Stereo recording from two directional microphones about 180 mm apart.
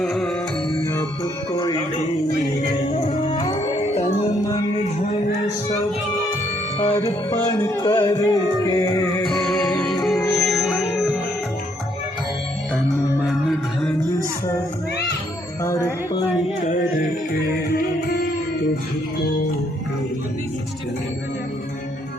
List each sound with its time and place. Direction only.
0.0 s music: centre (ahead or behind)
0.9 s music: 20° left (ahead or behind)
3.2 s music: 25° left (ahead or behind)
3.6 s music: 35° left (ahead or behind)
6.7 s music: 35° left (ahead or behind)
7.0 s music: 20° left (ahead or behind)
9.8 s music: centre (ahead or behind)
15.6 s music: 15° left (ahead or behind)